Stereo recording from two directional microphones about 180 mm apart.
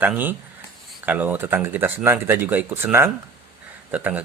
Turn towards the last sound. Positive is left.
turn(degrees=-10)  # may be behind; listen again after turning